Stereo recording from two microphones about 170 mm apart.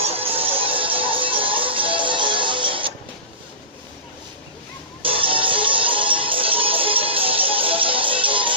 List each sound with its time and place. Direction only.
0.3 s music: 35° right (ahead or behind)
5.0 s music: 30° right (ahead or behind)